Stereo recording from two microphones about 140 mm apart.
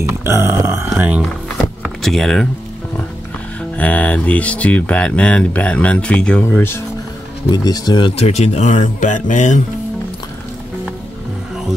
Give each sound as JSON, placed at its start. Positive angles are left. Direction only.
{"t": 0.2, "sound": "grunt", "side_deg": -20}
{"t": 1.8, "sound": "power windows", "side_deg": 0}
{"t": 3.7, "sound": "speech", "side_deg": 10}
{"t": 7.5, "sound": "speech", "side_deg": 30}
{"t": 8.2, "sound": "speech", "side_deg": 50}